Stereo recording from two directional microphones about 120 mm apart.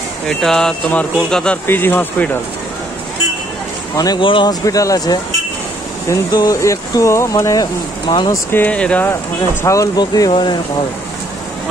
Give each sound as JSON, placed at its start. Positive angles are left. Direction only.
{"t": 0.4, "sound": "speech", "side_deg": 5}
{"t": 3.9, "sound": "speech", "side_deg": 30}
{"t": 4.2, "sound": "speech", "side_deg": 45}
{"t": 4.6, "sound": "speech", "side_deg": 30}
{"t": 8.1, "sound": "speech", "side_deg": 40}
{"t": 8.5, "sound": "speech", "side_deg": 15}
{"t": 9.6, "sound": "speech", "side_deg": 25}